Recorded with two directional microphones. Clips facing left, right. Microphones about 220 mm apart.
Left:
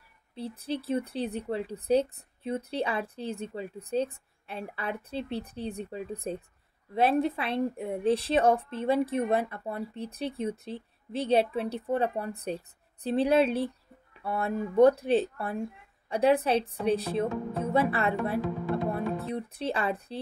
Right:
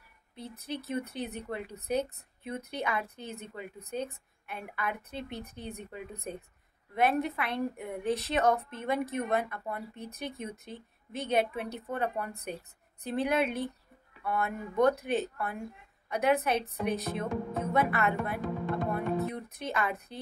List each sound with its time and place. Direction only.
0.3 s a woman's voice: 30° left (ahead or behind)